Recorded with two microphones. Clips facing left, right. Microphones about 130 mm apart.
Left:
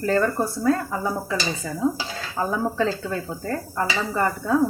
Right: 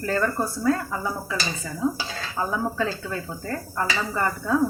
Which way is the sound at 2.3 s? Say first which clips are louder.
Left 2 dB; 30° left (ahead or behind).